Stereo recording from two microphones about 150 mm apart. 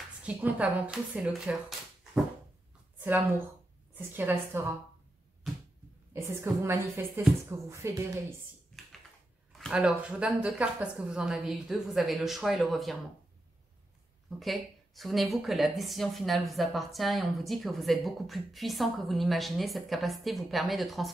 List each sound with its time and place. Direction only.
0.2 s speech: 10° right (ahead or behind)
3.0 s a sound: 15° right (ahead or behind)
3.9 s speech: 10° right (ahead or behind)
6.2 s a woman's voice: 20° right (ahead or behind)
9.5 s a woman's voice: centre (ahead or behind)
14.4 s a woman's voice: centre (ahead or behind)